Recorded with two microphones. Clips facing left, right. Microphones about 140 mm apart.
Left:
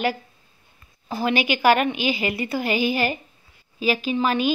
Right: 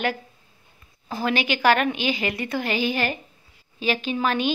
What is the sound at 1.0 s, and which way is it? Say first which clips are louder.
A woman's voice: left 2 dB; 5° left (ahead or behind).